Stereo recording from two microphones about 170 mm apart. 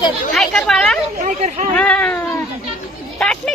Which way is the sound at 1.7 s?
10° left (ahead or behind).